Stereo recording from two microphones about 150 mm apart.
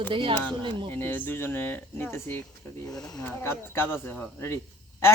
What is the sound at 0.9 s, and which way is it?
A man's voice, 15° left (ahead or behind).